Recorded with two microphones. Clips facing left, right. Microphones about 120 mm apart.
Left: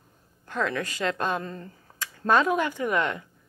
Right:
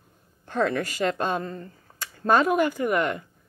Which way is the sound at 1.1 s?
10° right (ahead or behind).